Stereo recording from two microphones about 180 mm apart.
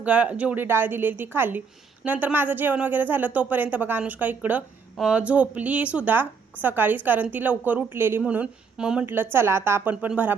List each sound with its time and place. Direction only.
0.0 s speech: 5° right (ahead or behind)